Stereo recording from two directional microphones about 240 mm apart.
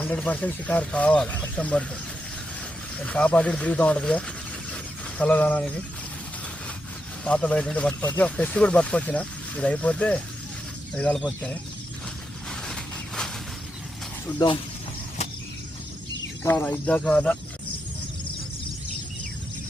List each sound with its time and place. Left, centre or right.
0.0 s speech: centre
3.0 s speech: centre
4.7 s a sound: centre
7.3 s speech: centre
12.5 s a sound: centre
14.3 s speech: left
16.4 s speech: centre